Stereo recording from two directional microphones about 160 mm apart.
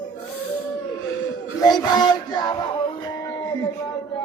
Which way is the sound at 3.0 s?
25° left (ahead or behind).